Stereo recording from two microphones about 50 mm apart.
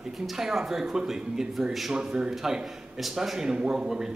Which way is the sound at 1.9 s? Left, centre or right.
Centre.